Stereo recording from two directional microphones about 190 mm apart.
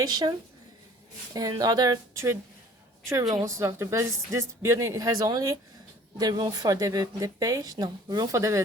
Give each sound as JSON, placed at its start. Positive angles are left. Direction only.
{"t": 0.0, "sound": "speech", "side_deg": -20}